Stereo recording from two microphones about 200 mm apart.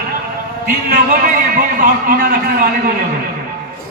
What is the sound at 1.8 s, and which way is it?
Speech, 45° right (ahead or behind).